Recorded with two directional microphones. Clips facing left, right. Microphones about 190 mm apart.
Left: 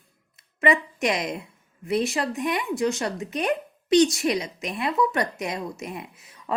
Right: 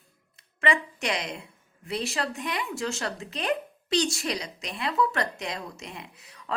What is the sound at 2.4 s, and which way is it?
Speech, 20° left (ahead or behind).